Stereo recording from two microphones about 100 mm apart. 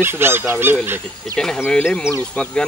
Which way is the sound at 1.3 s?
5° left (ahead or behind).